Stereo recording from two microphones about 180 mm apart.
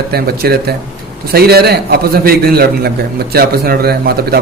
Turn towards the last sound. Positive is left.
turn(degrees=-60)  # may be behind; listen again after turning